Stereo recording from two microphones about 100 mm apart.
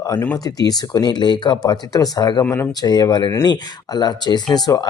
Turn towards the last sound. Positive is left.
turn(degrees=40)  # may be behind; listen again after turning